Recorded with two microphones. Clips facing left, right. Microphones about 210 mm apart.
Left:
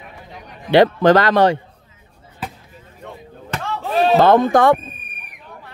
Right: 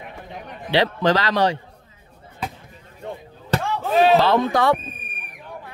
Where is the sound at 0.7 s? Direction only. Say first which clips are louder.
Left 7 dB; 50° left (ahead or behind).